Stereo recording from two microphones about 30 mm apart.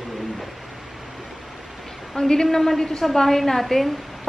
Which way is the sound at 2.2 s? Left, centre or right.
Centre.